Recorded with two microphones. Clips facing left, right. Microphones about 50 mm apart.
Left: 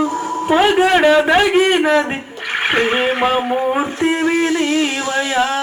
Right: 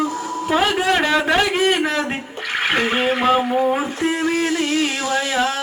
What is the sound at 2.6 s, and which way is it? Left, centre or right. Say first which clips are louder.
Speech: left 3 dB; left.